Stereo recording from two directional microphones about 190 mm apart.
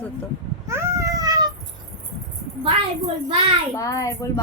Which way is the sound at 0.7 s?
15° right (ahead or behind).